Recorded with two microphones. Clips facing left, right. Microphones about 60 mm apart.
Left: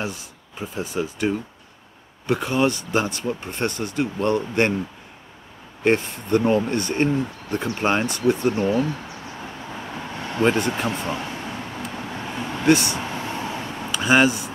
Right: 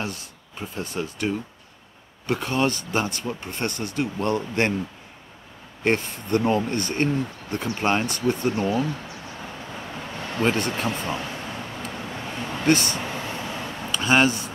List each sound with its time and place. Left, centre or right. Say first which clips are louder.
0.0 s speech: left 2 dB; centre
5.9 s speech: left 3 dB; centre
9.9 s vehicle: left 3 dB; left
10.5 s speech: left 3 dB; centre
11.0 s vehicle: left 1 dB; centre
12.6 s speech: left 3 dB; centre
13.0 s a sound: left 2 dB; left